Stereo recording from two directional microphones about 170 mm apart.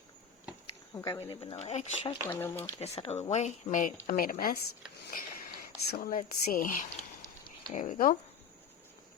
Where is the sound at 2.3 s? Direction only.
10° left (ahead or behind).